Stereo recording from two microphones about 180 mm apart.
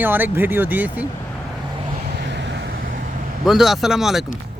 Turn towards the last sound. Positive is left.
turn(degrees=0)  # may be behind; listen again after turning